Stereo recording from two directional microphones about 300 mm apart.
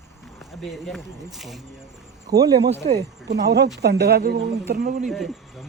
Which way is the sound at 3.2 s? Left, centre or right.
Right.